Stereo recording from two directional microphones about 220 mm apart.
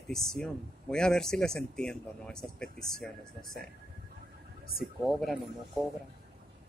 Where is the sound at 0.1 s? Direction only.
Centre (ahead or behind).